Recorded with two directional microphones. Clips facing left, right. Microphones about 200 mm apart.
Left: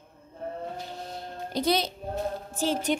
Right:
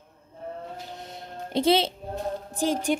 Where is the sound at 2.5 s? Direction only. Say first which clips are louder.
Right 2 dB; 15° right (ahead or behind).